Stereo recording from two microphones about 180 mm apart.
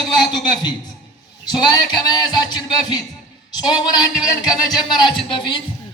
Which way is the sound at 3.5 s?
20° left (ahead or behind).